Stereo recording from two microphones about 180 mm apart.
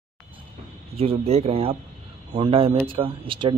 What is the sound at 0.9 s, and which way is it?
Speech, 30° right (ahead or behind).